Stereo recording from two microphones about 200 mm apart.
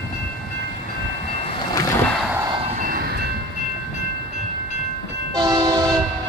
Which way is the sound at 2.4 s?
30° right (ahead or behind).